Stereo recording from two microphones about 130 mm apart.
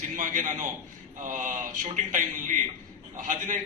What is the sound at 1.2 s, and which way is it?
A man's voice, 90° right.